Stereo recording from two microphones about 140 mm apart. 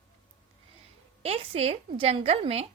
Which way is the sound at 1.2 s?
45° right (ahead or behind).